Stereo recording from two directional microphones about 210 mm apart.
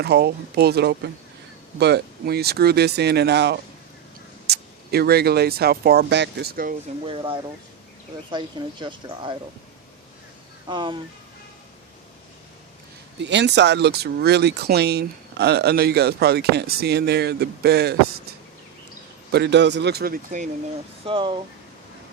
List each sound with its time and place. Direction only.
0.0 s speech: 50° right (ahead or behind)
7.0 s speech: 25° right (ahead or behind)
10.7 s speech: 20° right (ahead or behind)
13.2 s speech: 55° right (ahead or behind)
19.3 s speech: 55° right (ahead or behind)
21.0 s speech: 25° right (ahead or behind)